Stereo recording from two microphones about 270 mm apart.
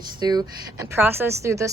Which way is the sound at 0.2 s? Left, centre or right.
Centre.